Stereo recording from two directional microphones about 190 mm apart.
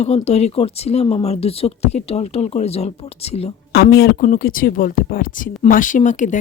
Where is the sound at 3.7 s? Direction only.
55° left (ahead or behind).